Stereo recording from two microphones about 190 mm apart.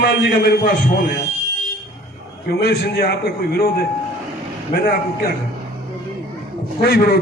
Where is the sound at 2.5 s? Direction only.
55° left (ahead or behind).